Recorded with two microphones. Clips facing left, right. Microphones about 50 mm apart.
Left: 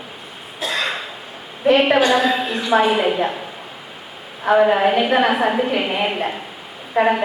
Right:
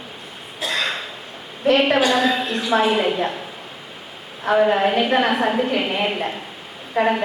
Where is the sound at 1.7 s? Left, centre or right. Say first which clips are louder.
Left 2 dB; centre.